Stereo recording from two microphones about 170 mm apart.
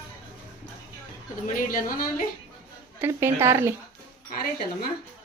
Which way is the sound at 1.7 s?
55° left (ahead or behind).